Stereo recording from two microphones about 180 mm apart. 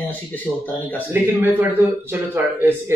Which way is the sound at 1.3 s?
10° right (ahead or behind).